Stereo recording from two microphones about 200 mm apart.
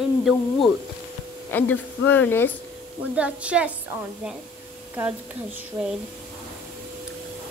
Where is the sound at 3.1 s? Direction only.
5° right (ahead or behind).